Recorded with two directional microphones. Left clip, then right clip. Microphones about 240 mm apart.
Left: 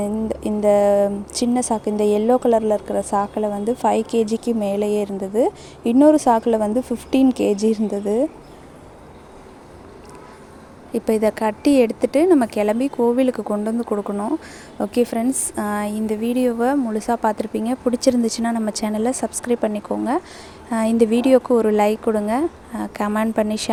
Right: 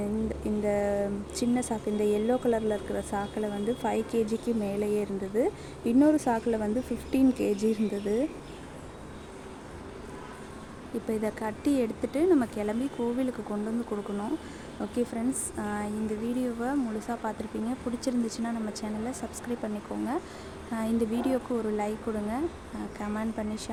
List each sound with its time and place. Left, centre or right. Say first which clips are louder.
0.3 s speech: left 15 dB; left
11.0 s speech: left 13 dB; left